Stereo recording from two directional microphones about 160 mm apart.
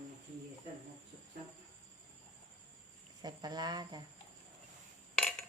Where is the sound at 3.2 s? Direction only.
25° right (ahead or behind).